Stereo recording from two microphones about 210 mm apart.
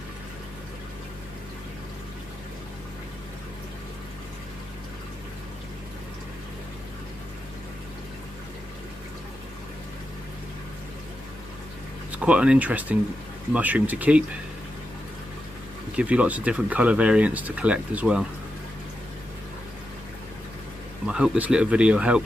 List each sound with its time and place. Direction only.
12.1 s speech: 5° right (ahead or behind)
16.0 s speech: 5° right (ahead or behind)
21.1 s speech: 5° right (ahead or behind)